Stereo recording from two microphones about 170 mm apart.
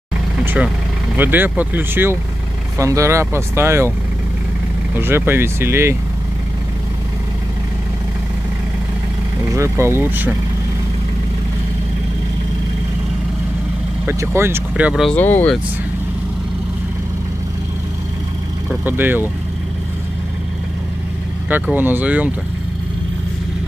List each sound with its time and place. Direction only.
1.1 s speech: 10° right (ahead or behind)
4.9 s speech: 15° right (ahead or behind)
9.4 s speech: 15° right (ahead or behind)
14.0 s speech: 15° right (ahead or behind)
15.1 s speech: 10° left (ahead or behind)
18.9 s speech: 10° right (ahead or behind)
21.5 s speech: 10° right (ahead or behind)